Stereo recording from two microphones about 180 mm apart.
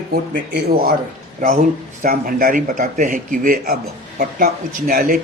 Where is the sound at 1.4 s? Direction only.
40° right (ahead or behind).